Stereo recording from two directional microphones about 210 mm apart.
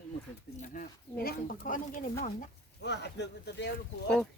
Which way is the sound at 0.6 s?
40° left (ahead or behind).